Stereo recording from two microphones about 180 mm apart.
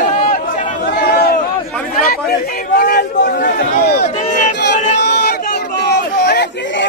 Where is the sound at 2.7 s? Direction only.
55° left (ahead or behind).